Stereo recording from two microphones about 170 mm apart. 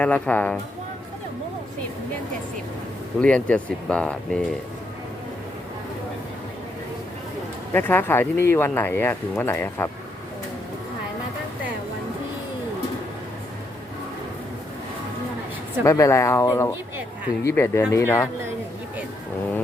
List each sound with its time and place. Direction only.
0.0 s speech: 10° left (ahead or behind)
3.2 s speech: 5° left (ahead or behind)
7.7 s speech: 10° left (ahead or behind)
15.8 s speech: 15° left (ahead or behind)